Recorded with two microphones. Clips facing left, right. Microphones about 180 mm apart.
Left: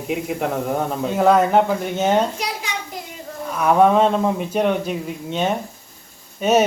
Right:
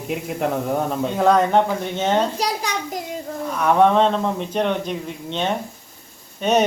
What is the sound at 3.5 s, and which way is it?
Speech, 5° left (ahead or behind).